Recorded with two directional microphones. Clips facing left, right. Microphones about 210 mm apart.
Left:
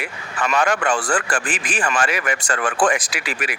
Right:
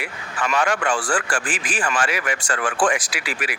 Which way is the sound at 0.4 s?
40° left (ahead or behind).